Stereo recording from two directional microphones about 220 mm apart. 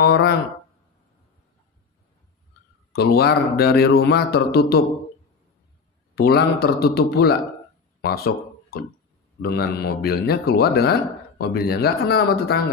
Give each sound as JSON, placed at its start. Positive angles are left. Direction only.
{"t": 0.0, "sound": "speech", "side_deg": 45}
{"t": 2.9, "sound": "speech", "side_deg": 45}
{"t": 6.1, "sound": "speech", "side_deg": 45}